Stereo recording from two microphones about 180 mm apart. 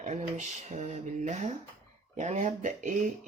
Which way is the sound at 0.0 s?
40° right (ahead or behind).